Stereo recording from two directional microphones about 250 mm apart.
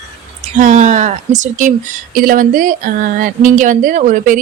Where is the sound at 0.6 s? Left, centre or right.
Right.